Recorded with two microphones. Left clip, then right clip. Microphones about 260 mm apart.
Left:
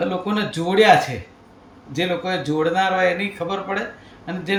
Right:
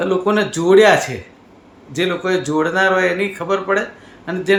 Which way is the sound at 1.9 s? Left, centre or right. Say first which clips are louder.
Right 4 dB; centre.